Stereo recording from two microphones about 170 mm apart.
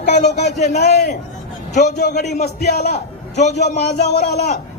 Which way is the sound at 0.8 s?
75° left (ahead or behind).